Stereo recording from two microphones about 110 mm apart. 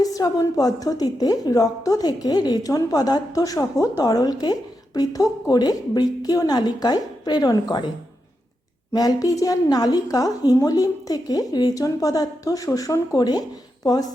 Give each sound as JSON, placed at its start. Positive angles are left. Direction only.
{"t": 0.0, "sound": "a woman's voice", "side_deg": 35}
{"t": 8.9, "sound": "a woman's voice", "side_deg": 35}